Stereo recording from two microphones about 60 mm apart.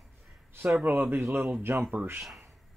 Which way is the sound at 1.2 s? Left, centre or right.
Right.